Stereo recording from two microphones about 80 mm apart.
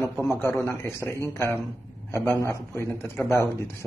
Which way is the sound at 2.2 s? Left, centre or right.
Left.